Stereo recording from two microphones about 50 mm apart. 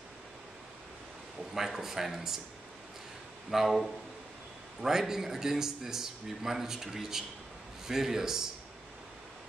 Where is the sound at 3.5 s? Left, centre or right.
Centre.